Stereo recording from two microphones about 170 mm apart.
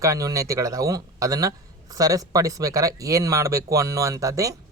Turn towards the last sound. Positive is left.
turn(degrees=-20)  # may be behind; listen again after turning